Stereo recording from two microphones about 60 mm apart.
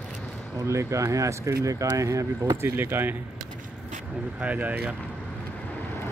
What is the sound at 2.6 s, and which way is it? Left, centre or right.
Speech, right.